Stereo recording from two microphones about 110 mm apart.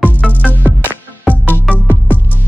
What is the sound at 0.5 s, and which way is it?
Music, 15° right (ahead or behind).